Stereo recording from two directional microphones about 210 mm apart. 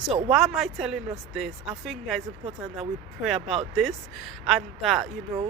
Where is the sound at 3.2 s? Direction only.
Centre (ahead or behind).